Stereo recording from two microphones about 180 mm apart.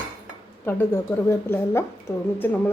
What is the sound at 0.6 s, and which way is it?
A woman's voice, 10° left (ahead or behind).